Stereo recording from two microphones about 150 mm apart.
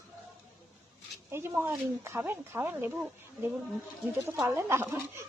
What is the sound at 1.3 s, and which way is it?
Speech, 15° right (ahead or behind).